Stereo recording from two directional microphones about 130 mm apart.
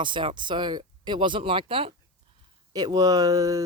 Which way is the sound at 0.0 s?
40° right (ahead or behind).